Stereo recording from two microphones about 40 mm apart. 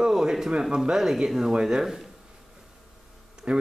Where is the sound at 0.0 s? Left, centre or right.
Centre.